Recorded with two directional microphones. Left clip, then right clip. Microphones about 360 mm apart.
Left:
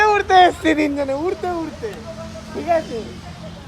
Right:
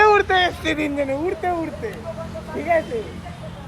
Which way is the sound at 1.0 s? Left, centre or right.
Centre.